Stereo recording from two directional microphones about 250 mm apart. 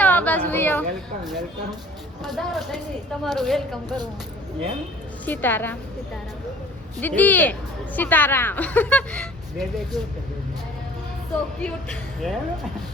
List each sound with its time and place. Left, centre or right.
0.0 s a sound: centre
2.2 s speech: centre
3.8 s speech: centre
5.2 s a woman's voice: centre
7.0 s a woman's voice: centre
11.6 s speech: centre